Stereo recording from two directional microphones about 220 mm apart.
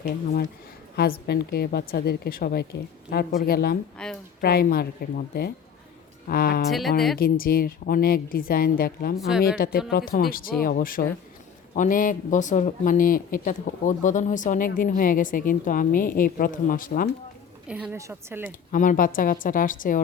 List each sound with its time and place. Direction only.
0.9 s a woman's voice: 45° left (ahead or behind)
3.9 s speech: 5° left (ahead or behind)
4.4 s a woman's voice: 40° left (ahead or behind)
6.7 s speech: centre (ahead or behind)
7.2 s a man's voice: 40° left (ahead or behind)
9.1 s speech: centre (ahead or behind)
9.6 s a woman's voice: 45° left (ahead or behind)
17.7 s speech: 5° right (ahead or behind)
18.7 s a man's voice: 35° left (ahead or behind)